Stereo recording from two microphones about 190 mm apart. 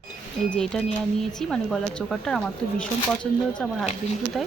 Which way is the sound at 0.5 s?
5° left (ahead or behind).